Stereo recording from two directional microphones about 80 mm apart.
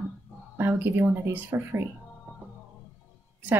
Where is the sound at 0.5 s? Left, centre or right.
Right.